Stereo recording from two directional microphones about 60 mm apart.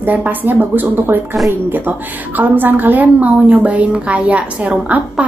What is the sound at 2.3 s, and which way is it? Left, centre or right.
A woman's voice, right.